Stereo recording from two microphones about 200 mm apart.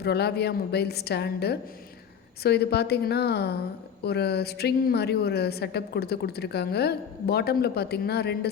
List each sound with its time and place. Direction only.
0.0 s a woman's voice: 55° left (ahead or behind)